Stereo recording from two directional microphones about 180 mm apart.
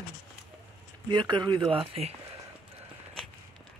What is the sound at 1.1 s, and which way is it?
Speech, 25° right (ahead or behind).